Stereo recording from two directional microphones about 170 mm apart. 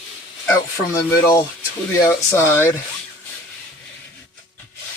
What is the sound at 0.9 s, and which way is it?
Speech, 20° left (ahead or behind).